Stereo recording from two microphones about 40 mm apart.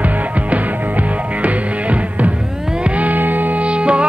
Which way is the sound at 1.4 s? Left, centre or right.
Right.